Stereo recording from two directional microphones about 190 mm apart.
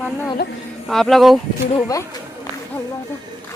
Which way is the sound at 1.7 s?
20° left (ahead or behind).